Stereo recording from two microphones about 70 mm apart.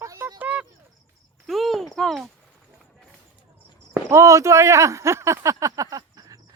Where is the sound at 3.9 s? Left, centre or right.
Right.